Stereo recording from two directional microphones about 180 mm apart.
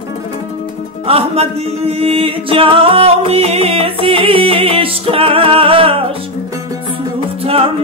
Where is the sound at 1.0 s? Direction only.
35° right (ahead or behind).